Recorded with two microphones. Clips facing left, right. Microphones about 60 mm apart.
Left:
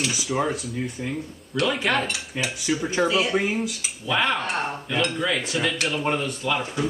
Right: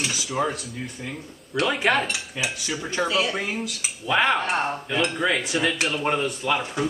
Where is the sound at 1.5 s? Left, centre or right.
Centre.